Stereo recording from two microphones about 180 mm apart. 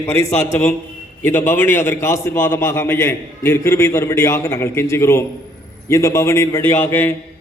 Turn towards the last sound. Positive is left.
turn(degrees=10)  # may be behind; listen again after turning